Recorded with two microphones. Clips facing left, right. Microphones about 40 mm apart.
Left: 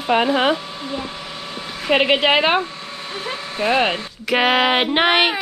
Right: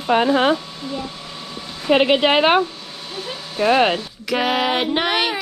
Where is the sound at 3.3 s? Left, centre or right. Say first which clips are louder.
Right 2 dB; left.